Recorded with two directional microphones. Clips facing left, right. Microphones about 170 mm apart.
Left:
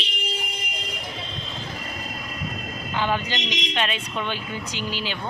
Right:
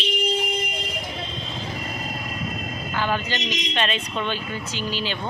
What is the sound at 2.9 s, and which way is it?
A man's voice, 15° left (ahead or behind).